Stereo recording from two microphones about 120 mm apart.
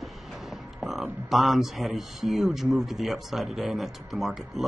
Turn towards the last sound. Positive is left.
turn(degrees=0)  # may be behind; listen again after turning